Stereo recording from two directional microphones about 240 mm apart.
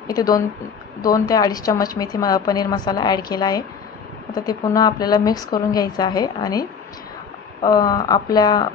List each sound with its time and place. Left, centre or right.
0.2 s a woman's voice: centre
7.6 s a woman's voice: centre